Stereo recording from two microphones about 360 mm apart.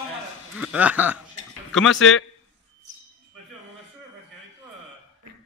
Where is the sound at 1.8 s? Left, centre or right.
Left.